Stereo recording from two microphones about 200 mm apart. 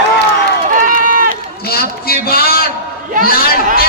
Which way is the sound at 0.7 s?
40° right (ahead or behind).